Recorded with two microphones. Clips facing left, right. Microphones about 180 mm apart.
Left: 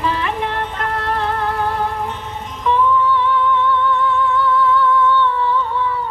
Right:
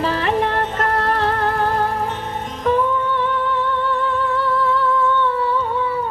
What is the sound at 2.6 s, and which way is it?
Music, 50° right (ahead or behind).